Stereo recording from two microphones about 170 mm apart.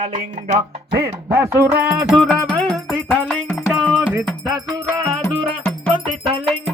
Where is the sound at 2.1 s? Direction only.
Centre (ahead or behind).